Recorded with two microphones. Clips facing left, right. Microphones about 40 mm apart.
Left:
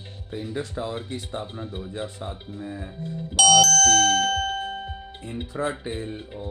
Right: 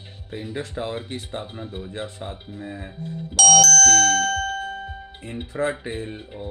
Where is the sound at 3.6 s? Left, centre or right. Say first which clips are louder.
Right 1 dB; right.